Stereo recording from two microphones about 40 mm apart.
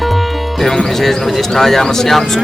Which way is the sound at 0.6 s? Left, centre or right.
Centre.